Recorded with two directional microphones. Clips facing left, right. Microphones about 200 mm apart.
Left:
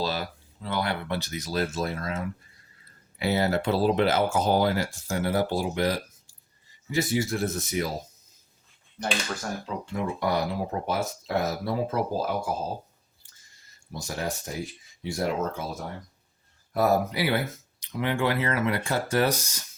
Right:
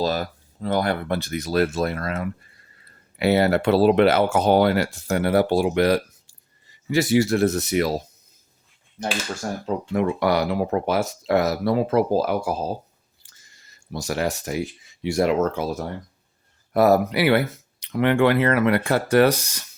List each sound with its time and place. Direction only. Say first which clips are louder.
0.0 s speech: right 6 dB; 45° right (ahead or behind); by 8.0 s 75° right (ahead or behind)
9.6 s speech: right 10 dB; 65° right (ahead or behind)
13.2 s a sound: right 7 dB; 80° right
15.0 s speech: right 8 dB; 75° right (ahead or behind)